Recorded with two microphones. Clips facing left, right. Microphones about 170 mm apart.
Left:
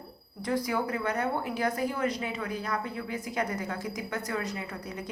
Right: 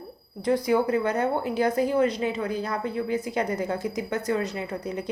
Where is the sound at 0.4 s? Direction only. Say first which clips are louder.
Right 7 dB; 25° right (ahead or behind).